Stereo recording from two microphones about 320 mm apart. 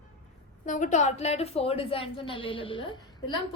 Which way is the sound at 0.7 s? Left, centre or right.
Left.